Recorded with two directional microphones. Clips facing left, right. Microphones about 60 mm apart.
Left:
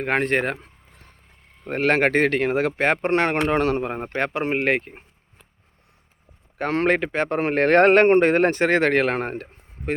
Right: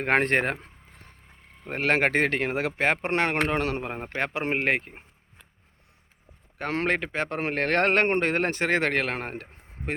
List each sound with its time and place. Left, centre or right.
0.0 s speech: right
0.4 s speech: right
1.6 s speech: centre
3.1 s speech: centre
3.6 s speech: centre
4.5 s speech: centre
6.6 s speech: centre
9.3 s a sound: centre